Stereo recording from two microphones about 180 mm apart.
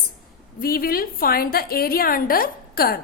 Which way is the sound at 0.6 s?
55° left (ahead or behind).